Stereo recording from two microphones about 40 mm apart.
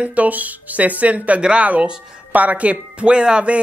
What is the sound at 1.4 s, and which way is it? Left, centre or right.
Speech, right.